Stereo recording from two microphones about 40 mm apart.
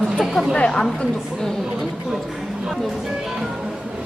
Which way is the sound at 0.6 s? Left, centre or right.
Left.